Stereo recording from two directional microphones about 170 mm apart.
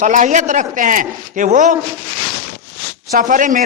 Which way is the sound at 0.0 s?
45° right (ahead or behind).